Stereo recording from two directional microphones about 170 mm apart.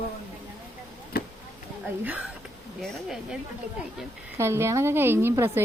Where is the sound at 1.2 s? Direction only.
65° left (ahead or behind).